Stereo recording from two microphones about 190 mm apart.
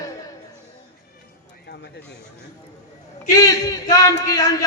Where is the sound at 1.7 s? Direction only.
60° left (ahead or behind).